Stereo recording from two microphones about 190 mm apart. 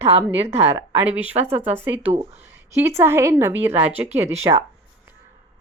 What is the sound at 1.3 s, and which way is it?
A woman's voice, 35° right (ahead or behind).